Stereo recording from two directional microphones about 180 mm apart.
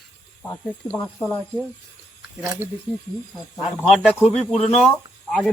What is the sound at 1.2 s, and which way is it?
Speech, 30° left (ahead or behind).